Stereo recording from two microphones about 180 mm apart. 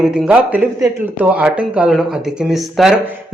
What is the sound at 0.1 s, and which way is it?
Speech, 5° right (ahead or behind).